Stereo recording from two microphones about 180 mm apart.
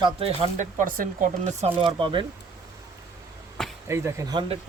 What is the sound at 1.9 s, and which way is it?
Speech, 25° right (ahead or behind).